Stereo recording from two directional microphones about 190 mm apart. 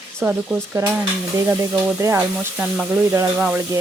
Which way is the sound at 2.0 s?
15° right (ahead or behind).